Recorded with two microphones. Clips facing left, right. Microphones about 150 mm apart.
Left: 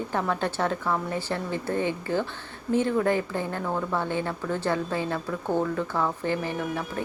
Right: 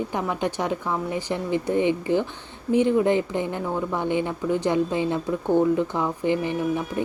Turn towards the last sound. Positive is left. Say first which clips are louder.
# right 5 dB
turn(degrees=-15)  # may be behind; listen again after turning